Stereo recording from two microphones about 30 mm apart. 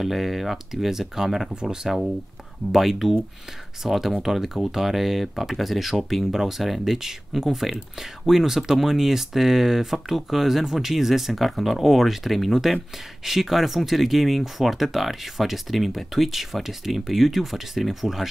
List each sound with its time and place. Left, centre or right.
0.0 s speech: centre
1.5 s speech: right
2.7 s speech: centre
11.4 s speech: centre
13.2 s speech: centre